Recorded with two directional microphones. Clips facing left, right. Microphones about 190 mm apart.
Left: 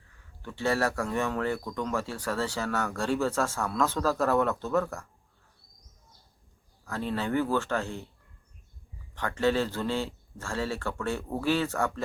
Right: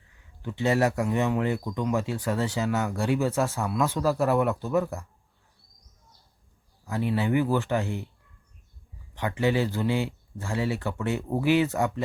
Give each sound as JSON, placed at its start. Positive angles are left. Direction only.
{"t": 0.2, "sound": "speech", "side_deg": -15}
{"t": 6.8, "sound": "speech", "side_deg": -15}
{"t": 9.1, "sound": "speech", "side_deg": -15}